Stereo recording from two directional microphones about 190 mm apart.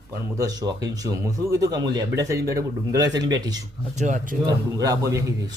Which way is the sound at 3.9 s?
40° right (ahead or behind).